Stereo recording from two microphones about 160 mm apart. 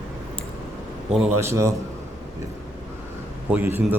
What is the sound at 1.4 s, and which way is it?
Speech, 20° right (ahead or behind).